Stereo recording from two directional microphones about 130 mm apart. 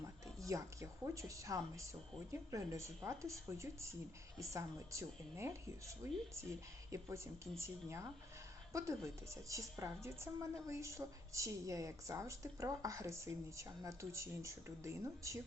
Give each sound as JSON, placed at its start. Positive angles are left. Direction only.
{"t": 0.0, "sound": "a woman's voice", "side_deg": -25}